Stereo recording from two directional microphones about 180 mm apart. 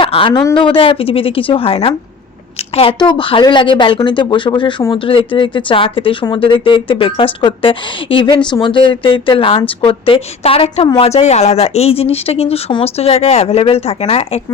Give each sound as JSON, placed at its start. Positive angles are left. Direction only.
{"t": 0.0, "sound": "a woman's voice", "side_deg": 30}